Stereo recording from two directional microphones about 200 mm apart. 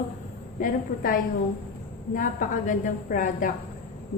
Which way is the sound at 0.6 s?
45° left (ahead or behind).